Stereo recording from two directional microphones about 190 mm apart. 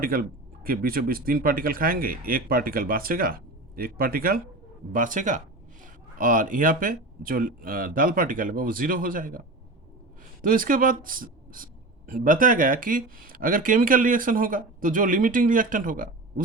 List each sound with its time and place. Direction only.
0.0 s speech: 50° right (ahead or behind)
10.4 s speech: 45° right (ahead or behind)